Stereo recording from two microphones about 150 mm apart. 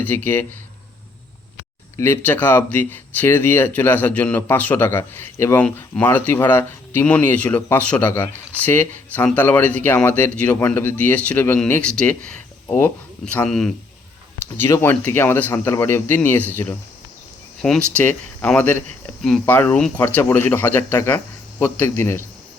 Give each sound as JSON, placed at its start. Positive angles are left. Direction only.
{"t": 0.0, "sound": "a man's voice", "side_deg": 10}
{"t": 2.0, "sound": "a man's voice", "side_deg": 15}